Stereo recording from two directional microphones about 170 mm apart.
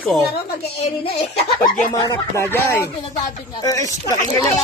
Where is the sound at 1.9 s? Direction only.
25° left (ahead or behind).